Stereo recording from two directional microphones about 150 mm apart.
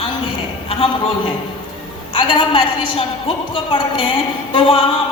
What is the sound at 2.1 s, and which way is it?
A woman's voice, 35° left (ahead or behind).